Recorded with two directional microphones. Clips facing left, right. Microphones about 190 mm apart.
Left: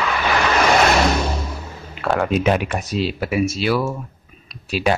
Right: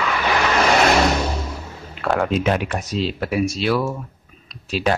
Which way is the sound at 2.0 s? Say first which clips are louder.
Left 1 dB; centre (ahead or behind).